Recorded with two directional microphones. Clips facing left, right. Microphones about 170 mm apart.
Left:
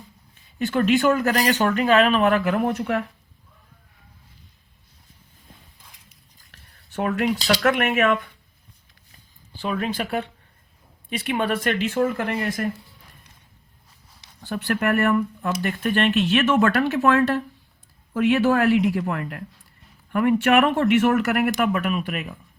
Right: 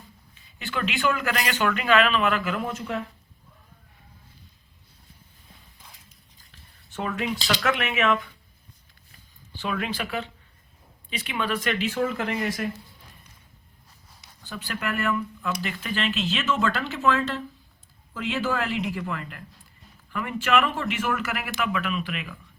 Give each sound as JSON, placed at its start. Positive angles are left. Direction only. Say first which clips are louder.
{"t": 0.6, "sound": "speech", "louder": "left 8 dB", "side_deg": 40}
{"t": 6.5, "sound": "a sound", "louder": "left 13 dB", "side_deg": 60}
{"t": 7.5, "sound": "speech", "louder": "left 5 dB", "side_deg": 50}
{"t": 9.6, "sound": "speech", "louder": "left 4 dB", "side_deg": 35}
{"t": 9.9, "sound": "speech", "louder": "left 4 dB", "side_deg": 50}
{"t": 14.4, "sound": "speech", "louder": "left 9 dB", "side_deg": 65}
{"t": 21.5, "sound": "speech", "louder": "left 5 dB", "side_deg": 45}